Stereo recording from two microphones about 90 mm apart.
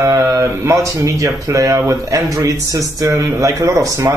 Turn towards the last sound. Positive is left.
turn(degrees=-35)  # may be behind; listen again after turning